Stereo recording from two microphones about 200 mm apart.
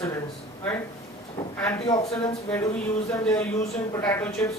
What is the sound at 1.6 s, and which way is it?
A man's voice, 20° left (ahead or behind).